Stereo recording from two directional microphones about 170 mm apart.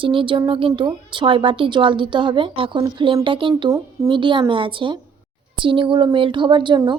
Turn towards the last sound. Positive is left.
turn(degrees=-25)  # may be behind; listen again after turning